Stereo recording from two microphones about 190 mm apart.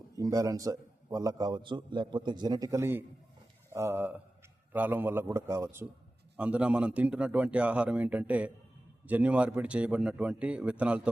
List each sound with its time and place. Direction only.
0.2 s a man's voice: 20° right (ahead or behind)